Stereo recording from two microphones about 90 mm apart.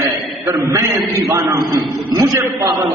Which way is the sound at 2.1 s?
45° right (ahead or behind).